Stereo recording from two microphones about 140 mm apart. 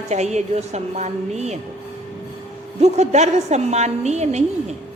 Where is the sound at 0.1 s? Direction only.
55° right (ahead or behind).